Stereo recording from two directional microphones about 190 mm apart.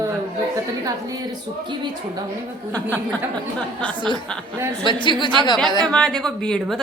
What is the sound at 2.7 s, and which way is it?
Speech, 10° left (ahead or behind).